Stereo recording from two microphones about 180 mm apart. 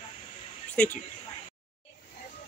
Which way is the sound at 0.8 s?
5° left (ahead or behind).